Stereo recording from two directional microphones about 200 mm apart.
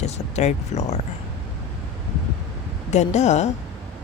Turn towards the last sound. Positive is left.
turn(degrees=35)  # may be behind; listen again after turning